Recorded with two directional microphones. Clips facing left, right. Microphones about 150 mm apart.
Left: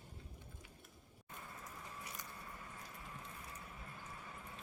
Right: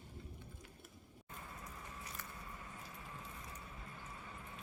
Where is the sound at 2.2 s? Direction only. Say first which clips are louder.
Right 1 dB; 15° left (ahead or behind).